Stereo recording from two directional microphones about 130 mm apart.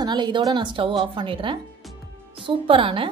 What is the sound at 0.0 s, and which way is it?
A woman's voice, 35° right (ahead or behind).